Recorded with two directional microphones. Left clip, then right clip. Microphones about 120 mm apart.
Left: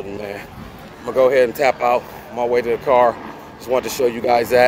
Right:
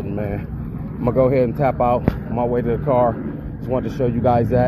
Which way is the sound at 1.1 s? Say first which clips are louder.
Left 4 dB; 30° left (ahead or behind).